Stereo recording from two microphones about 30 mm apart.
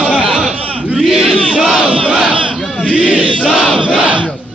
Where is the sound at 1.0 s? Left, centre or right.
Centre.